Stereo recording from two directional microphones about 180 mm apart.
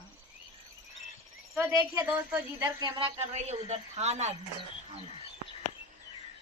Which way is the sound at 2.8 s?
35° right (ahead or behind).